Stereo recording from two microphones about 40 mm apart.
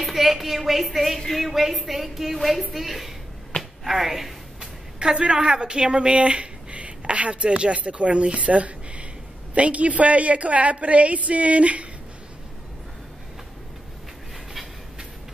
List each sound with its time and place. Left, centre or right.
0.0 s a woman's voice: centre
4.6 s a sound: right
5.2 s a woman's voice: right